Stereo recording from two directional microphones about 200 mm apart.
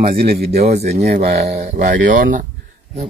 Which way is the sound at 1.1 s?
35° right (ahead or behind).